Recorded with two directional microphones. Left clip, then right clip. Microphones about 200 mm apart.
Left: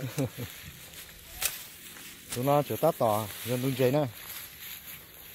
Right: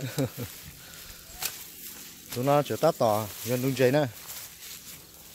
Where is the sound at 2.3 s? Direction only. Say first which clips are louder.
Right 2 dB; 10° right (ahead or behind).